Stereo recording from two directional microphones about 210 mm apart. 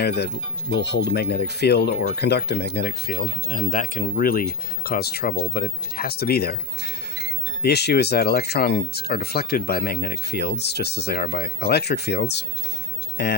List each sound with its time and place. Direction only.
0.0 s speech: 50° left (ahead or behind)